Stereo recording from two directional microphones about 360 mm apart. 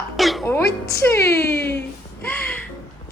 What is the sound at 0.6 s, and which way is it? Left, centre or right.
Speech, left.